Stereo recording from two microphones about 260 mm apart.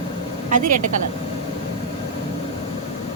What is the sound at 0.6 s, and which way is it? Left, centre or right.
Speech, right.